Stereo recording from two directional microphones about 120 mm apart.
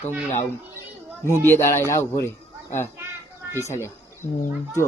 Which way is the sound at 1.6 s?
20° left (ahead or behind).